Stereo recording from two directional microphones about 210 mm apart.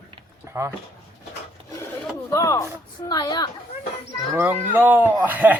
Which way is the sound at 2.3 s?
15° left (ahead or behind).